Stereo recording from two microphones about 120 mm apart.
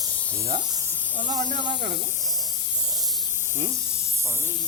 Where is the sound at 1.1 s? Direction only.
90° right.